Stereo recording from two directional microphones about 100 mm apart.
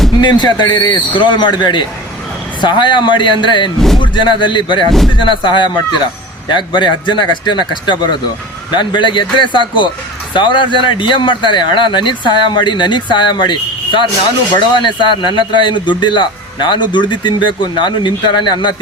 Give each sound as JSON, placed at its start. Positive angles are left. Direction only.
{"t": 0.2, "sound": "a man's voice", "side_deg": 50}
{"t": 3.8, "sound": "speech", "side_deg": 5}
{"t": 4.0, "sound": "a man's voice", "side_deg": 55}